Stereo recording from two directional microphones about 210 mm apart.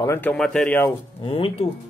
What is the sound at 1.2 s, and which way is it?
Speech, 25° left (ahead or behind).